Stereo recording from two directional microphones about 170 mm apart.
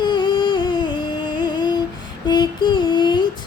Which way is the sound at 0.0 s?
25° left (ahead or behind).